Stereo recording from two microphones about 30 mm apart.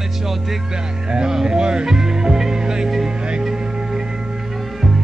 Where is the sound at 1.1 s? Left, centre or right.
Right.